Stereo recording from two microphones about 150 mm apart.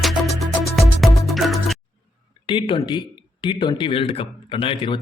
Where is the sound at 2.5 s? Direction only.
35° left (ahead or behind).